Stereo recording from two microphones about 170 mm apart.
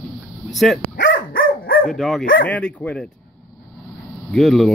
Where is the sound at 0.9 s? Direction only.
90° left; by 1.9 s 60° left (ahead or behind).